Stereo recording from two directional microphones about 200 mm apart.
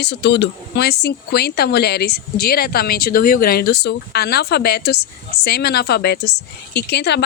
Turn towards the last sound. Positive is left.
turn(degrees=55)  # may be behind; listen again after turning